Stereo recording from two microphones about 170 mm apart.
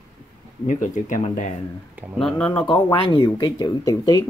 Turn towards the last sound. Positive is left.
turn(degrees=20)  # may be behind; listen again after turning